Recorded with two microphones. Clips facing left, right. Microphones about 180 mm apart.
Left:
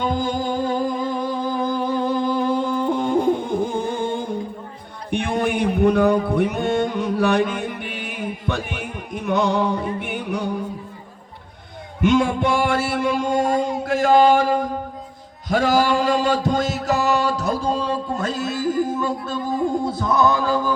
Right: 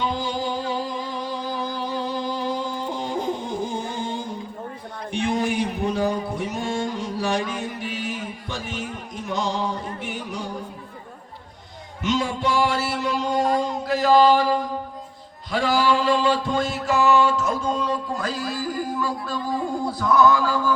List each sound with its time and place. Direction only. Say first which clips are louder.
0.0 s music: left 3 dB; 50° left (ahead or behind)
5.1 s mantra: left 2 dB; 60° left (ahead or behind)
12.0 s music: left 6 dB; 55° left (ahead or behind); by 20.7 s 20° left (ahead or behind)